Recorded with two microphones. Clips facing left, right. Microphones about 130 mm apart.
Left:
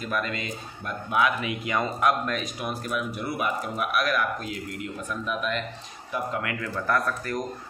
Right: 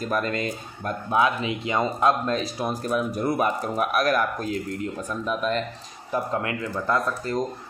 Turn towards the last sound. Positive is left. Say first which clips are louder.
# right 3 dB
turn(degrees=-25)  # may be behind; listen again after turning